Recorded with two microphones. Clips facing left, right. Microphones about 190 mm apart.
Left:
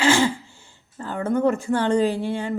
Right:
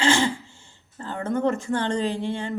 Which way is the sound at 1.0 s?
25° right (ahead or behind).